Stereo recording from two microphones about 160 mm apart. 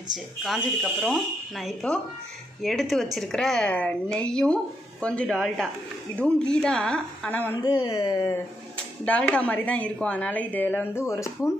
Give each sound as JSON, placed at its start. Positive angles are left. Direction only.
{"t": 0.1, "sound": "a woman's voice", "side_deg": 0}
{"t": 7.8, "sound": "speech", "side_deg": 25}
{"t": 9.0, "sound": "a woman's voice", "side_deg": 10}